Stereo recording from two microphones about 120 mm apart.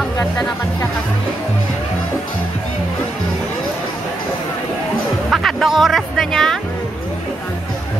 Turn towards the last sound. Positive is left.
turn(degrees=5)  # may be behind; listen again after turning